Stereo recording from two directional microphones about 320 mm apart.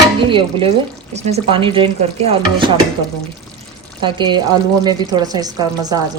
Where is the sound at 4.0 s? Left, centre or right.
Centre.